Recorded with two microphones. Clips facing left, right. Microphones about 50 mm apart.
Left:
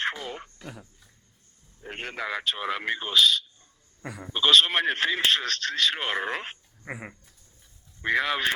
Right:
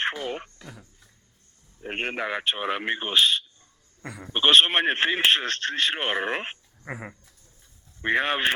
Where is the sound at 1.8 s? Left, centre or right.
Right.